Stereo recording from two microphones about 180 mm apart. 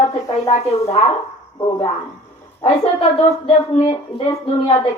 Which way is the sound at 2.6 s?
35° left (ahead or behind).